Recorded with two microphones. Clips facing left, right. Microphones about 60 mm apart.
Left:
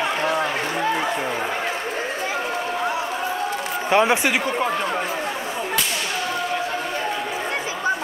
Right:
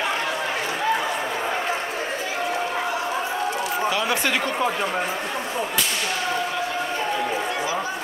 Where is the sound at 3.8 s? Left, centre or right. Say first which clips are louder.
Left 8 dB; left.